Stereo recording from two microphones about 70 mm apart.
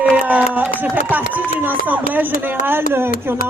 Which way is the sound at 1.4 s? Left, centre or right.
Right.